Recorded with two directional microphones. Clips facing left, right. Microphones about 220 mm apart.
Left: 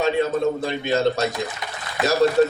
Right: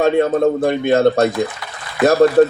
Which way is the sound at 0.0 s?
55° right (ahead or behind).